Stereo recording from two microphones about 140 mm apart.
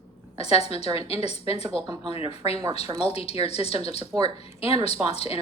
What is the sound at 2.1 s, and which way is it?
A woman's voice, 45° left (ahead or behind).